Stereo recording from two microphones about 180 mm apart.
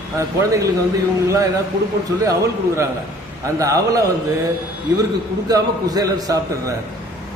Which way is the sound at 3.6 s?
20° right (ahead or behind).